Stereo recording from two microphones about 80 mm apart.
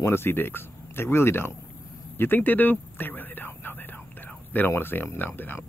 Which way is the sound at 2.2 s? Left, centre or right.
Left.